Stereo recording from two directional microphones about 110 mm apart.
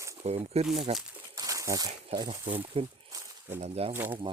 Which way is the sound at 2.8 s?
55° right (ahead or behind).